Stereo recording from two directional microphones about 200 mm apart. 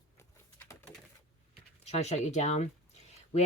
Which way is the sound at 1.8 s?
35° left (ahead or behind).